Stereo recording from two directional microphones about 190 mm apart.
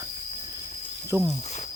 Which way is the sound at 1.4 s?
35° left (ahead or behind).